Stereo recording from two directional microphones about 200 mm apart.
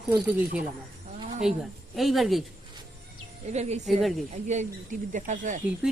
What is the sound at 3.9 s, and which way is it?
Speech, centre (ahead or behind).